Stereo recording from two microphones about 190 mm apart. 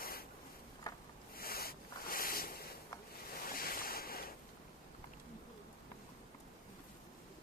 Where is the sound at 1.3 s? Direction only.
50° left (ahead or behind).